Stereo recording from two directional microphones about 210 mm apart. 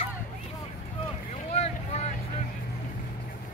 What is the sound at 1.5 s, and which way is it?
Boat, 30° left (ahead or behind).